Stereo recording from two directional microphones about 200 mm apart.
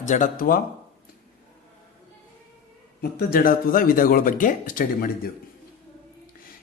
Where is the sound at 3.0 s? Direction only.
50° left (ahead or behind).